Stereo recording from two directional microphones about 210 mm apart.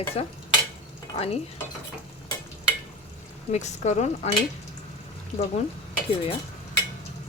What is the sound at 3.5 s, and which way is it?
Speech, 35° left (ahead or behind).